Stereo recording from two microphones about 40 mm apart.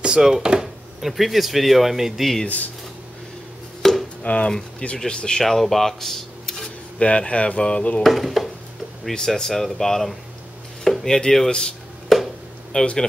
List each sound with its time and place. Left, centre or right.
0.0 s speech: centre
1.0 s speech: centre
2.4 s speech: left
3.8 s chopping: centre
4.2 s speech: left
4.5 s speech: centre
5.4 s speech: centre
7.0 s speech: left
8.0 s speech: centre
9.3 s speech: centre
12.1 s a sound: centre
12.7 s speech: left